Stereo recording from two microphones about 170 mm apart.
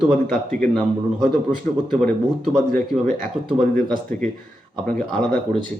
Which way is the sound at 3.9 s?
50° right (ahead or behind).